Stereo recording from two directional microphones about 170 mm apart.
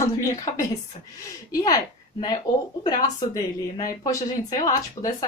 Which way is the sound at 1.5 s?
20° left (ahead or behind).